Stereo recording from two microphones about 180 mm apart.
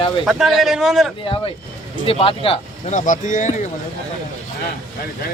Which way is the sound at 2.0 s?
30° left (ahead or behind).